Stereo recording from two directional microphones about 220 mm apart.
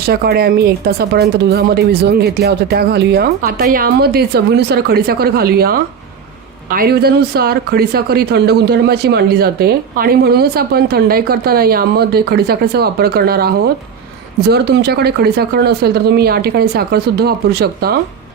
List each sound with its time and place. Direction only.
0.1 s speech: 45° right (ahead or behind)